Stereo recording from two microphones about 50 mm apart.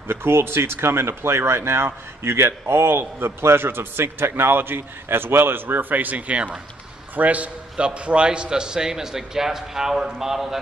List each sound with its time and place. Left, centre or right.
0.1 s a man's voice: right; by 10.6 s centre